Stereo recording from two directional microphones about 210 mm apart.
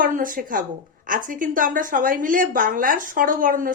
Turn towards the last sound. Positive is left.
turn(degrees=-40)  # may be behind; listen again after turning